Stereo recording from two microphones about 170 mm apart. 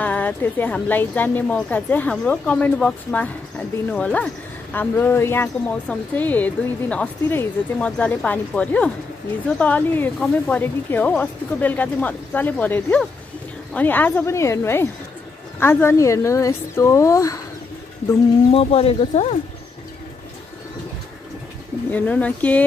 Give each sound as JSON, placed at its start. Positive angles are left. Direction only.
{"t": 0.0, "sound": "a woman's voice", "side_deg": 10}
{"t": 18.5, "sound": "speech", "side_deg": 35}
{"t": 21.9, "sound": "a woman's voice", "side_deg": 10}